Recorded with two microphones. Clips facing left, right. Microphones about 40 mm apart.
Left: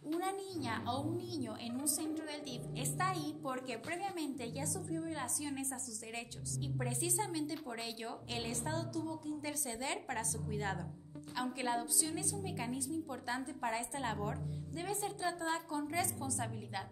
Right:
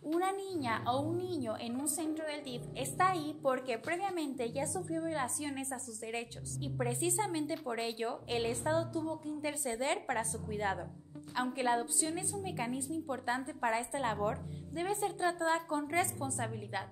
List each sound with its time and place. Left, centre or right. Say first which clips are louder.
0.2 s a woman's voice: right 5 dB; right
6.6 s a woman's voice: right 5 dB; centre; by 16.4 s right